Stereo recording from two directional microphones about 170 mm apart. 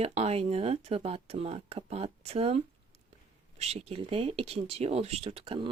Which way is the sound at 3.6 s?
40° right (ahead or behind).